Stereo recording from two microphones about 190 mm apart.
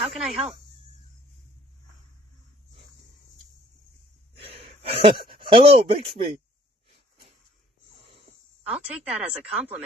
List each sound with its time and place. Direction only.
0.0 s speech: 5° right (ahead or behind)
4.4 s gasp: 30° right (ahead or behind)
5.1 s speech: 50° right (ahead or behind)
5.4 s speech: 30° right (ahead or behind)
8.6 s speech: 5° right (ahead or behind)